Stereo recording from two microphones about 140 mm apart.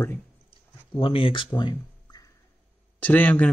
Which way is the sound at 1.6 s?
35° left (ahead or behind).